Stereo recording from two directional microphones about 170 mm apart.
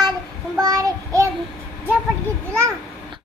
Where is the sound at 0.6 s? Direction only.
20° right (ahead or behind).